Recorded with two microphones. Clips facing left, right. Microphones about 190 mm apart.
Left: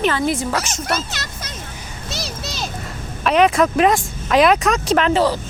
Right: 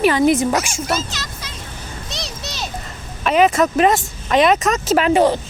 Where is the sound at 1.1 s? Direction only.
55° left (ahead or behind).